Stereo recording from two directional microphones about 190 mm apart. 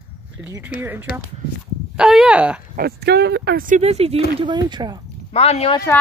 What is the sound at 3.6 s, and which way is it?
Speech, 35° right (ahead or behind).